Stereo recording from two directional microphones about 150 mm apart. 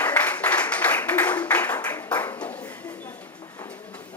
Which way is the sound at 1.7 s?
25° left (ahead or behind).